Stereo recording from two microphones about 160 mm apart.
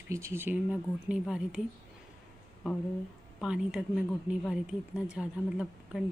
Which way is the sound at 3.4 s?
5° right (ahead or behind).